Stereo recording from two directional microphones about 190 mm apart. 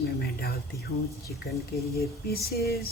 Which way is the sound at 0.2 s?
55° left (ahead or behind).